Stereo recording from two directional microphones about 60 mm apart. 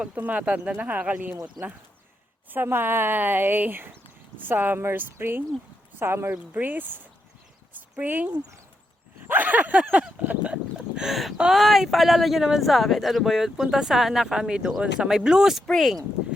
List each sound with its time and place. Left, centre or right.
0.0 s speech: right
1.6 s speech: centre
2.5 s a woman's voice: right
6.3 s speech: right
10.8 s a sound: centre
11.5 s speech: centre
15.6 s speech: centre